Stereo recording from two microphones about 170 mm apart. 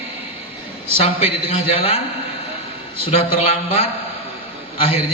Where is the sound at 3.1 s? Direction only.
35° left (ahead or behind).